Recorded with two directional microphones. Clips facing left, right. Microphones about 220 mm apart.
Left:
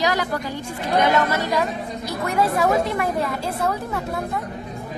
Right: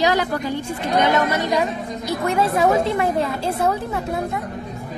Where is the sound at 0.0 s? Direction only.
25° right (ahead or behind).